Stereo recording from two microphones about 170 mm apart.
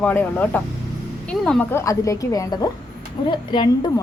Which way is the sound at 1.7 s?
20° left (ahead or behind).